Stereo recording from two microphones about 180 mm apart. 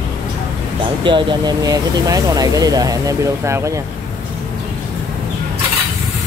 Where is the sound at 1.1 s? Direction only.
25° right (ahead or behind).